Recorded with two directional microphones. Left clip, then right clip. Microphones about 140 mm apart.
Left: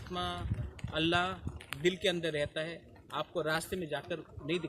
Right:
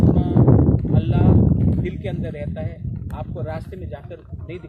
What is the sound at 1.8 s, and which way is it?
Speech, 30° left (ahead or behind).